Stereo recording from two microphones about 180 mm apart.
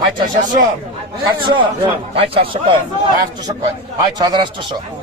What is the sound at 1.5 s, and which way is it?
A man's voice, 30° right (ahead or behind).